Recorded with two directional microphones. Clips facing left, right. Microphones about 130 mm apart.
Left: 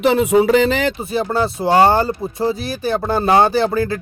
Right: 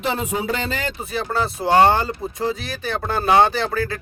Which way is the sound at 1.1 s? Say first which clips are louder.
Left 5 dB; 30° left (ahead or behind).